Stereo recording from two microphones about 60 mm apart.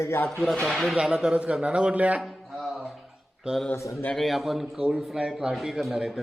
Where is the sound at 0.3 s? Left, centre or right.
Centre.